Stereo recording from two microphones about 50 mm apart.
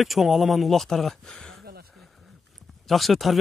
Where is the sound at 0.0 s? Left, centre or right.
Centre.